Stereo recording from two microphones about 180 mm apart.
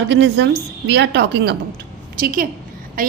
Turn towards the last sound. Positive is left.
turn(degrees=-50)  # may be behind; listen again after turning